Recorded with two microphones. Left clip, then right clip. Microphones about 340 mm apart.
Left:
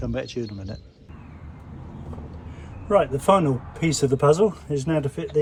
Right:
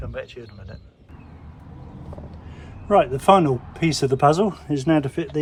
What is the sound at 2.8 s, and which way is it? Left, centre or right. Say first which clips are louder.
Speech: right 3 dB; right.